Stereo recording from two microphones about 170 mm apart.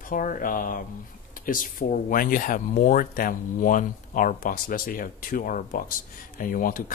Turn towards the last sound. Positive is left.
turn(degrees=55)  # may be behind; listen again after turning